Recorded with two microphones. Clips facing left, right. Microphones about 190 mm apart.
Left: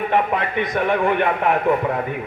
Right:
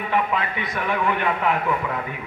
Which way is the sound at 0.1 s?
60° left (ahead or behind).